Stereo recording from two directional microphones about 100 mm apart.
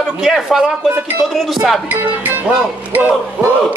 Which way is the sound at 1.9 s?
20° right (ahead or behind).